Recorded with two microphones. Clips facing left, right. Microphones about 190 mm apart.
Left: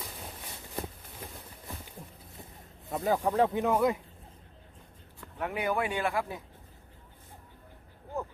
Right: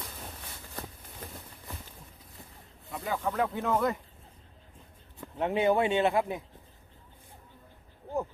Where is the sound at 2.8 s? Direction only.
40° left (ahead or behind).